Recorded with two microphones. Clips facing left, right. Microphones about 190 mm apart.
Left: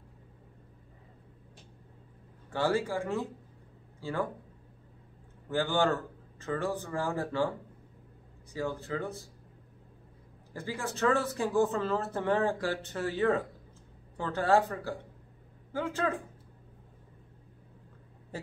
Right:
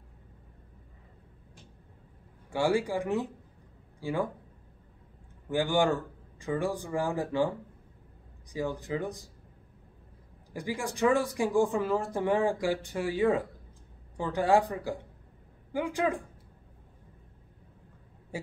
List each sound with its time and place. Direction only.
2.5 s speech: 15° right (ahead or behind)
5.5 s speech: 15° right (ahead or behind)
8.5 s speech: 15° right (ahead or behind)
10.5 s speech: 15° right (ahead or behind)
18.3 s a sound: 10° right (ahead or behind)